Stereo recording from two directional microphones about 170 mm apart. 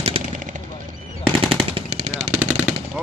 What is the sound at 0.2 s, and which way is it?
Gunshot, 35° right (ahead or behind).